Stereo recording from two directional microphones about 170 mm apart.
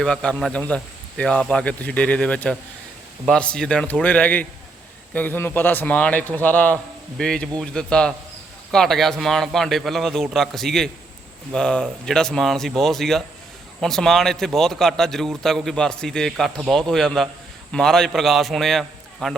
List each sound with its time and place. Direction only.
0.0 s a man's voice: 5° left (ahead or behind)